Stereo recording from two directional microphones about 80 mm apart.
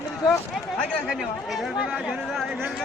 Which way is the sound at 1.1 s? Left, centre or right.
Centre.